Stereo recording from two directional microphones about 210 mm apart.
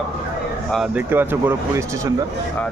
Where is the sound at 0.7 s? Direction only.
5° right (ahead or behind).